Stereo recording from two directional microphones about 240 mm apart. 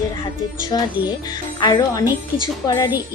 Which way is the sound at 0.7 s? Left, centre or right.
Centre.